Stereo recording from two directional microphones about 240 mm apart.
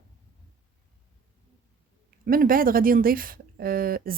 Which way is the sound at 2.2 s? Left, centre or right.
Right.